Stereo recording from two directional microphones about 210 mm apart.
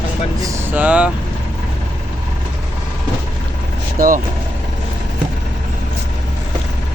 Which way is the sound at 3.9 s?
40° right (ahead or behind).